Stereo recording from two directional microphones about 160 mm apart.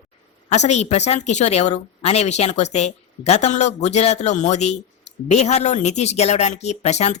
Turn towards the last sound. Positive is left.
turn(degrees=40)  # may be behind; listen again after turning